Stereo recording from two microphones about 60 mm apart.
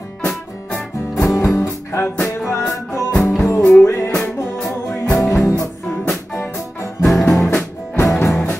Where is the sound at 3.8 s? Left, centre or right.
Left.